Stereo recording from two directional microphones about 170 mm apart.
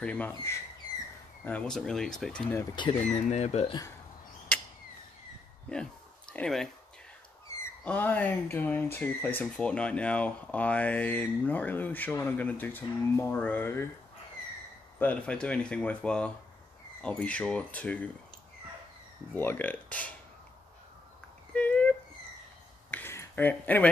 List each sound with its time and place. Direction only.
0.0 s speech: 10° left (ahead or behind)
3.3 s speech: 40° left (ahead or behind)
6.3 s speech: 5° left (ahead or behind)
15.0 s speech: 10° left (ahead or behind)
19.3 s speech: 10° left (ahead or behind)
21.5 s a sound: 10° left (ahead or behind)